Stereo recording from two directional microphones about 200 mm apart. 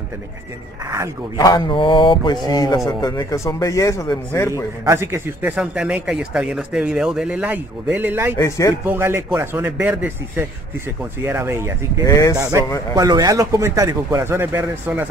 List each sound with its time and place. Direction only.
0.8 s a man's voice: 15° right (ahead or behind)
1.4 s mantra: 20° left (ahead or behind)
2.4 s a man's voice: 20° left (ahead or behind)
4.8 s a man's voice: 15° right (ahead or behind)
8.4 s a man's voice: 15° left (ahead or behind)
8.8 s a man's voice: 10° right (ahead or behind)
12.0 s a man's voice: 15° left (ahead or behind)
12.4 s a man's voice: 15° right (ahead or behind)